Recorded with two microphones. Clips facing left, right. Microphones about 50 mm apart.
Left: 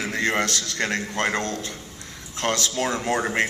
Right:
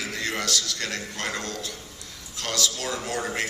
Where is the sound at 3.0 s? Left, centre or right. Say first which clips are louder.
Left 5 dB; left.